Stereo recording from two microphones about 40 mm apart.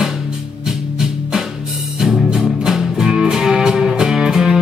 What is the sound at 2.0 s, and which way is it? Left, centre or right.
Music, centre.